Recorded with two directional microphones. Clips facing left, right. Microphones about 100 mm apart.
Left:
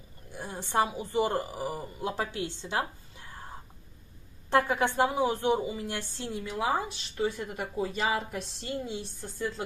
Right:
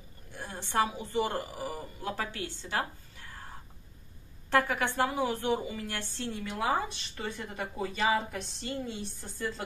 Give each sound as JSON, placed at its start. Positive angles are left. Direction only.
{"t": 0.3, "sound": "a woman's voice", "side_deg": 15}
{"t": 4.5, "sound": "a woman's voice", "side_deg": 20}
{"t": 6.4, "sound": "speech", "side_deg": 5}